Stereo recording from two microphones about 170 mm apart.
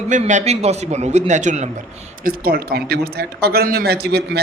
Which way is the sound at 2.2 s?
60° right (ahead or behind).